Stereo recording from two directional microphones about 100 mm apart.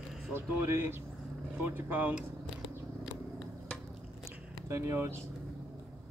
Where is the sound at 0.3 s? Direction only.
25° right (ahead or behind).